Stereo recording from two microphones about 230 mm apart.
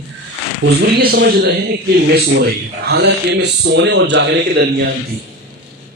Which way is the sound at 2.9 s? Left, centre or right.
Right.